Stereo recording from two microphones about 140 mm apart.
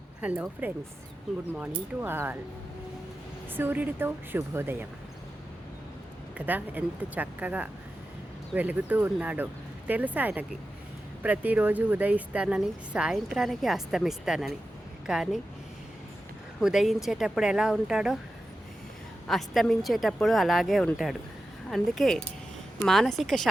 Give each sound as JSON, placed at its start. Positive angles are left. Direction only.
{"t": 0.2, "sound": "speech", "side_deg": -10}
{"t": 2.0, "sound": "speech", "side_deg": -15}
{"t": 3.5, "sound": "speech", "side_deg": -15}
{"t": 6.3, "sound": "a woman's voice", "side_deg": -10}
{"t": 16.6, "sound": "a woman's voice", "side_deg": 0}
{"t": 19.3, "sound": "a woman's voice", "side_deg": 0}